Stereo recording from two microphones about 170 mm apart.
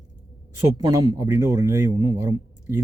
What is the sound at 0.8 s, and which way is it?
Speech, 20° right (ahead or behind).